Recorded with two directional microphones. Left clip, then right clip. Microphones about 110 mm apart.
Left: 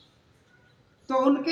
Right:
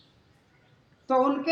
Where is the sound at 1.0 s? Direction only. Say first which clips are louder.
Right 1 dB; 25° right (ahead or behind).